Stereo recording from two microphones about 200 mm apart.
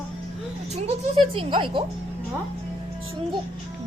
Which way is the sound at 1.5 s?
25° right (ahead or behind).